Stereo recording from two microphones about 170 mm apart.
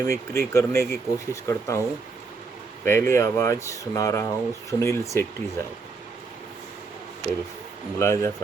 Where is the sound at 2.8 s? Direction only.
15° left (ahead or behind).